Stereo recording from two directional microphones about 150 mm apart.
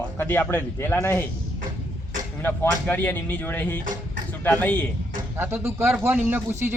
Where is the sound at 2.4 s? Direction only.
10° left (ahead or behind).